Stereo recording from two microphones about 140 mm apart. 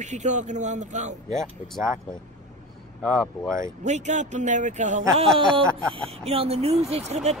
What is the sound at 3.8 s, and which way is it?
Speech, 55° right (ahead or behind).